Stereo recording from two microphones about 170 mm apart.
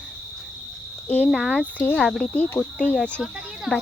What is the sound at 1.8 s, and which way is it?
Speech, 10° left (ahead or behind).